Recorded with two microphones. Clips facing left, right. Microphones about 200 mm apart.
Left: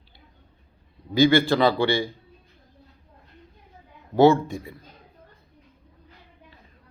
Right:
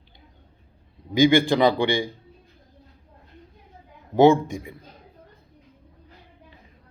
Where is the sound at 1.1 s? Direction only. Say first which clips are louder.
Right 1 dB; 15° right (ahead or behind).